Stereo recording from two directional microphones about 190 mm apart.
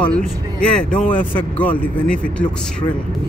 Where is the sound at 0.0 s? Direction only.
5° left (ahead or behind).